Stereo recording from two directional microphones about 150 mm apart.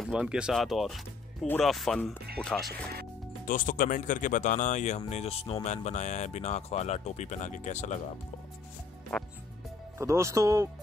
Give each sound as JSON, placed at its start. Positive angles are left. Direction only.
{"t": 0.0, "sound": "speech", "side_deg": -5}
{"t": 3.4, "sound": "speech", "side_deg": 60}
{"t": 9.1, "sound": "speech", "side_deg": 5}
{"t": 9.9, "sound": "speech", "side_deg": -20}